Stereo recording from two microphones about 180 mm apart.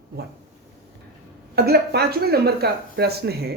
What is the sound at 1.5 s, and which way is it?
Speech, 60° right (ahead or behind).